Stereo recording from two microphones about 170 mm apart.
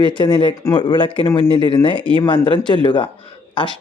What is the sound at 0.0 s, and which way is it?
Speech, 25° left (ahead or behind).